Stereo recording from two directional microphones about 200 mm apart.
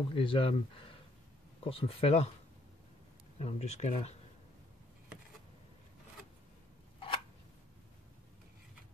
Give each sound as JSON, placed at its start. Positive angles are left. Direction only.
{"t": 0.1, "sound": "speech", "side_deg": 25}
{"t": 3.3, "sound": "speech", "side_deg": 30}